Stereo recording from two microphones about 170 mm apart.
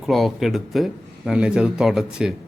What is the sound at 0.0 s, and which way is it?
Speech, centre (ahead or behind).